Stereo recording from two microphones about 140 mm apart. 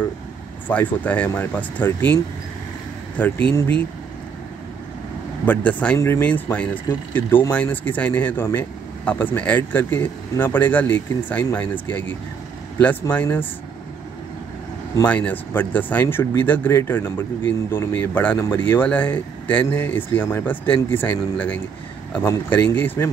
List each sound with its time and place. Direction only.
0.7 s speech: 10° left (ahead or behind)
3.2 s speech: 10° left (ahead or behind)
5.4 s speech: 10° left (ahead or behind)
13.1 s speech: 10° left (ahead or behind)
15.0 s speech: 10° left (ahead or behind)